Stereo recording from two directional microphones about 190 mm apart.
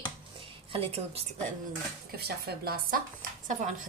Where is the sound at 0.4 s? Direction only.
30° right (ahead or behind).